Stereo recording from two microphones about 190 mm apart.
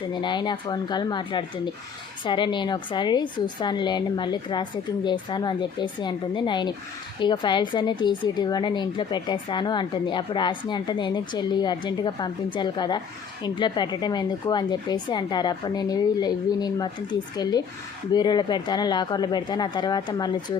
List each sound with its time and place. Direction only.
0.1 s a woman's voice: 25° left (ahead or behind)